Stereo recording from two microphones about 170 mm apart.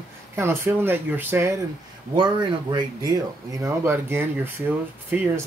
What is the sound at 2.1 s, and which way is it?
Speech, 25° right (ahead or behind).